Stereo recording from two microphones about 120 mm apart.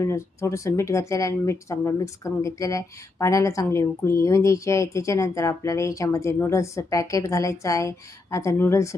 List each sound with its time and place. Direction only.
0.0 s speech: 25° left (ahead or behind)